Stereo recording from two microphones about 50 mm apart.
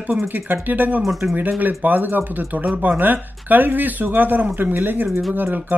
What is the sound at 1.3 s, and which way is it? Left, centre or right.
Speech, right.